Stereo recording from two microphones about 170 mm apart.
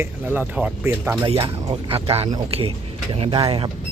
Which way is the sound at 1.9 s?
35° right (ahead or behind).